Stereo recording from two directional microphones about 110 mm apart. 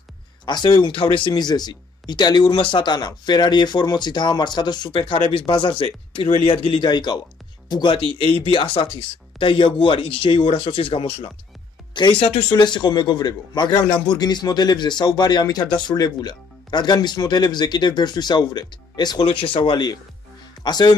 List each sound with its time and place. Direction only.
0.5 s speech: 40° left (ahead or behind); by 12.4 s 60° left (ahead or behind)
12.4 s speech: 45° left (ahead or behind)
20.6 s speech: 40° left (ahead or behind)